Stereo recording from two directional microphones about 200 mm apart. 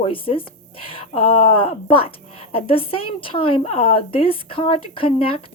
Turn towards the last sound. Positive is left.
turn(degrees=25)  # may be behind; listen again after turning